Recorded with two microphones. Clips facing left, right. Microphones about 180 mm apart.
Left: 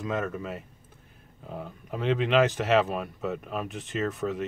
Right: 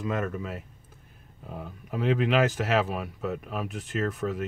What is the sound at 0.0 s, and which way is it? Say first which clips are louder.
Speech: even; centre (ahead or behind).